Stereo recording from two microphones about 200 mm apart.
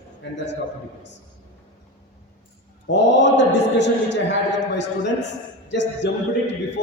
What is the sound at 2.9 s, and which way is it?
Speech, 60° left (ahead or behind).